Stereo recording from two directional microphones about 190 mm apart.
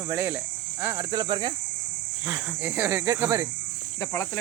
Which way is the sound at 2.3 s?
10° right (ahead or behind).